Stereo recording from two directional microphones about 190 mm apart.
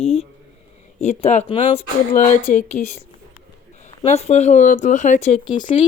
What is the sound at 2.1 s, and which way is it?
Speech, 45° left (ahead or behind).